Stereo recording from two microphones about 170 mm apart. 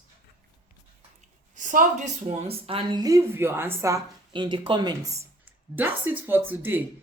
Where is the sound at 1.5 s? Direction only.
50° right (ahead or behind); by 3.0 s 35° right (ahead or behind).